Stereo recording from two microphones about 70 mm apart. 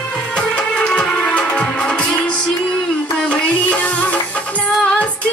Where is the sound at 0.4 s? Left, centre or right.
Centre.